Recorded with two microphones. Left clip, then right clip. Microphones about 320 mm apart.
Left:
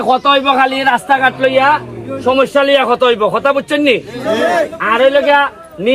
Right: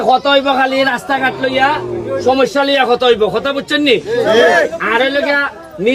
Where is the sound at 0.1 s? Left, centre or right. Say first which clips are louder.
Left 1 dB; centre.